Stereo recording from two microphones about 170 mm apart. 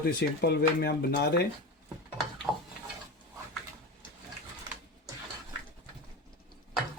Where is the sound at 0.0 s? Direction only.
80° left.